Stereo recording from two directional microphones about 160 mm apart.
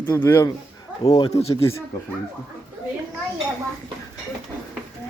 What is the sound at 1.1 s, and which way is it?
Speech, 35° left (ahead or behind).